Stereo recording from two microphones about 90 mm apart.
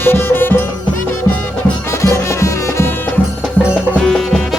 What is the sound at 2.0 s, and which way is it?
Music, 30° left (ahead or behind).